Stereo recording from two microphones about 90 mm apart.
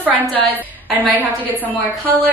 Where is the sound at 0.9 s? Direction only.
20° right (ahead or behind).